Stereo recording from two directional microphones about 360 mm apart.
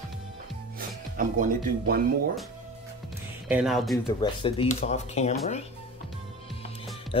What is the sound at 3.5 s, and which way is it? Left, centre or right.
Speech, centre.